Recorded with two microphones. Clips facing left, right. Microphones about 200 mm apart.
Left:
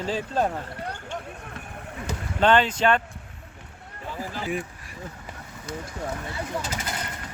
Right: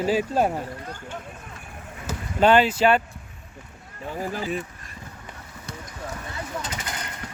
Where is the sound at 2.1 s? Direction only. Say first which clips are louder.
Right 2 dB; 10° right (ahead or behind).